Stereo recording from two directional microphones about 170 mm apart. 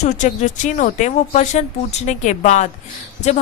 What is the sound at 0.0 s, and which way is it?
A woman's voice, 45° left (ahead or behind).